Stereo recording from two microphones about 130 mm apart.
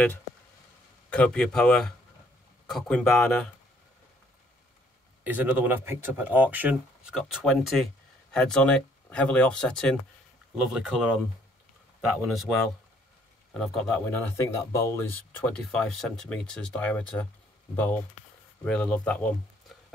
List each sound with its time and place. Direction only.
1.1 s speech: 10° left (ahead or behind)
5.2 s speech: 15° right (ahead or behind)
7.2 s speech: centre (ahead or behind)
12.2 s speech: centre (ahead or behind)
14.3 s speech: 25° left (ahead or behind)
15.5 s speech: 5° left (ahead or behind)